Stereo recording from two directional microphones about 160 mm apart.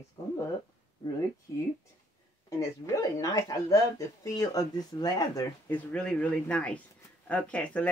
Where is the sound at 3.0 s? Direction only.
20° left (ahead or behind).